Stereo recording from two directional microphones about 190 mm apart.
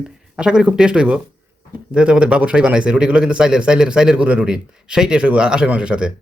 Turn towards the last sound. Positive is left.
turn(degrees=-5)  # may be behind; listen again after turning